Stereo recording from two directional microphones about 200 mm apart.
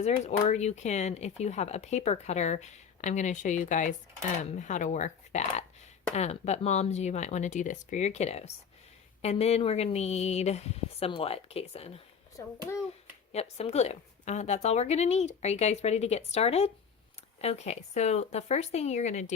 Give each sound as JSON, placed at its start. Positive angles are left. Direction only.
{"t": 0.0, "sound": "speech", "side_deg": 35}
{"t": 12.4, "sound": "a child's voice", "side_deg": 15}
{"t": 13.3, "sound": "speech", "side_deg": 30}